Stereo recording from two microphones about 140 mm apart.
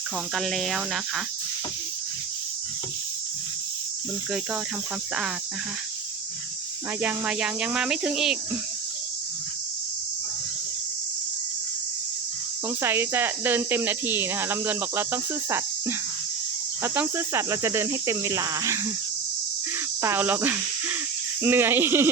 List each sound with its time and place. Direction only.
0.3 s speech: 5° left (ahead or behind)
7.0 s speech: 10° right (ahead or behind)
12.6 s speech: 15° right (ahead or behind)
20.0 s speech: 15° right (ahead or behind)